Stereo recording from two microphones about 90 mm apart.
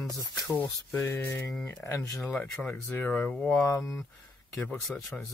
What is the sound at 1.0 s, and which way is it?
Speech, 25° left (ahead or behind).